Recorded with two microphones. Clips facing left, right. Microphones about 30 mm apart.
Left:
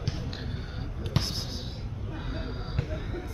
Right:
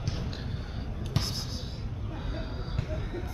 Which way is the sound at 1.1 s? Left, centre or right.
Left.